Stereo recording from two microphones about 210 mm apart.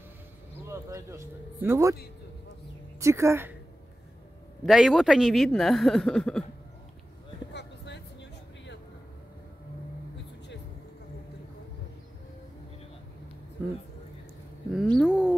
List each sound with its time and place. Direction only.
0.7 s speech: 15° right (ahead or behind)
3.0 s a woman's voice: 15° right (ahead or behind)
4.6 s speech: centre (ahead or behind)
7.5 s vehicle: 55° left (ahead or behind)
14.8 s a sound: centre (ahead or behind)